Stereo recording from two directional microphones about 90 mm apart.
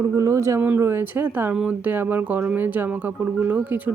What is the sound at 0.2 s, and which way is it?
Speech, 35° right (ahead or behind).